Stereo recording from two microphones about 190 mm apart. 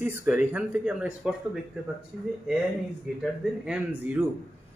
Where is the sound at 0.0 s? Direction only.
10° right (ahead or behind).